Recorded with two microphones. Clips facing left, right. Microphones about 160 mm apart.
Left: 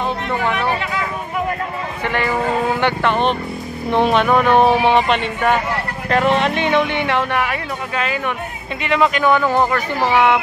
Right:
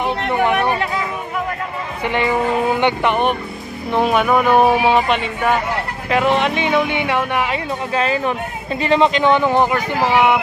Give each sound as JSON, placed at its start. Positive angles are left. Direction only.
{"t": 0.3, "sound": "speech", "side_deg": -15}
{"t": 2.0, "sound": "speech", "side_deg": -20}
{"t": 7.9, "sound": "speech", "side_deg": -30}